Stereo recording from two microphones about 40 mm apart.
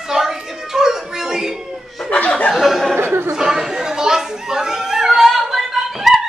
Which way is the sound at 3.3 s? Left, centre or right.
Centre.